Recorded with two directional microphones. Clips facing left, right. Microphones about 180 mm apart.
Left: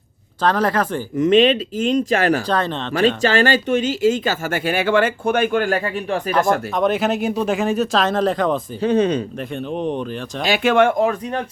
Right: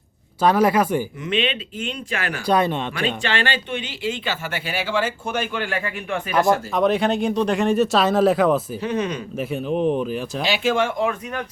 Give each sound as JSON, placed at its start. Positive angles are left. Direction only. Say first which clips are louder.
{"t": 0.4, "sound": "speech", "louder": "right 1 dB", "side_deg": -10}
{"t": 1.2, "sound": "speech", "louder": "left 10 dB", "side_deg": 40}
{"t": 2.5, "sound": "speech", "louder": "right 2 dB", "side_deg": -10}
{"t": 3.2, "sound": "speech", "louder": "left 7 dB", "side_deg": 40}
{"t": 6.3, "sound": "speech", "louder": "right 1 dB", "side_deg": 0}
{"t": 8.8, "sound": "speech", "louder": "left 7 dB", "side_deg": 30}
{"t": 9.4, "sound": "speech", "louder": "right 2 dB", "side_deg": -5}
{"t": 10.4, "sound": "speech", "louder": "left 6 dB", "side_deg": 55}
{"t": 11.0, "sound": "speech", "louder": "left 4 dB", "side_deg": 35}